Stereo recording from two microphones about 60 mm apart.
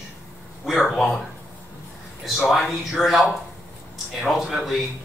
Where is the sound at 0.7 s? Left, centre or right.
Centre.